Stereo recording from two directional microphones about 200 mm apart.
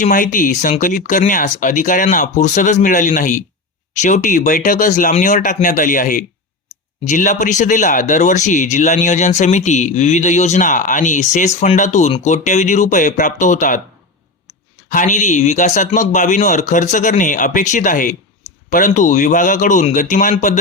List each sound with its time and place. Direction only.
0.0 s speech: 40° left (ahead or behind)
14.8 s speech: 40° left (ahead or behind)